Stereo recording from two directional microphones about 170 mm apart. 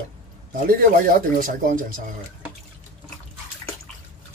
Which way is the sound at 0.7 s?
55° right (ahead or behind).